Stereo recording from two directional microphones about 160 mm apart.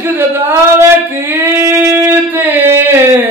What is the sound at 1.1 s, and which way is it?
Singing, 10° right (ahead or behind).